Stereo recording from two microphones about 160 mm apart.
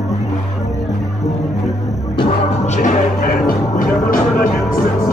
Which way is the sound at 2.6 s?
50° left (ahead or behind).